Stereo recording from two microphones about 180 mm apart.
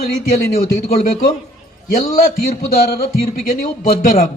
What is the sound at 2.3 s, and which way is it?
Speech, 55° left (ahead or behind).